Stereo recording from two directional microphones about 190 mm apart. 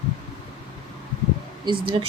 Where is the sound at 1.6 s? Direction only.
25° right (ahead or behind).